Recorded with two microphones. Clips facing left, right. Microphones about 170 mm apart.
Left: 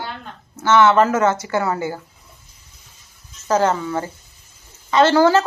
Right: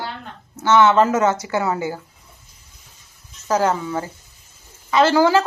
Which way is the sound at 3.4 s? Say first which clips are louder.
Left 1 dB; 10° right (ahead or behind).